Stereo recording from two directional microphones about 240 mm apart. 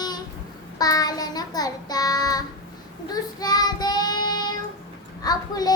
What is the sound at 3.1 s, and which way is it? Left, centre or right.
Child singing, centre.